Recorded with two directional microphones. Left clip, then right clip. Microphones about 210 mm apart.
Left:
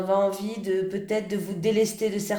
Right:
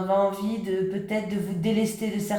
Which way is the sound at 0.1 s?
40° left (ahead or behind).